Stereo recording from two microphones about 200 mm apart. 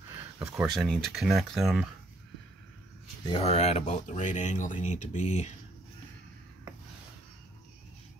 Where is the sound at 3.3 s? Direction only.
30° left (ahead or behind).